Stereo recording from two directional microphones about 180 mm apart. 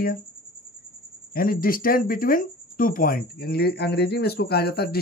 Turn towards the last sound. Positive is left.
turn(degrees=60)  # may be behind; listen again after turning